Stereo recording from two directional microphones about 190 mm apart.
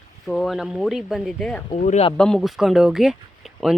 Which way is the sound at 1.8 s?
40° left (ahead or behind).